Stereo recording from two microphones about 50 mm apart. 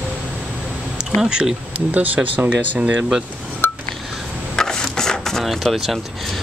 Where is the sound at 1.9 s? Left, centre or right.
Right.